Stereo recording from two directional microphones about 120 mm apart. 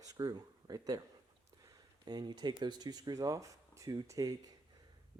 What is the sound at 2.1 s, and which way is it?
Speech, 35° right (ahead or behind).